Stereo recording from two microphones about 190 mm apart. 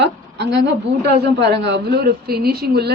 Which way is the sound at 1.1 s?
60° right (ahead or behind).